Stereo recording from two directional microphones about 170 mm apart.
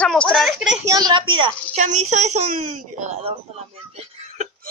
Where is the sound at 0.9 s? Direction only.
25° right (ahead or behind).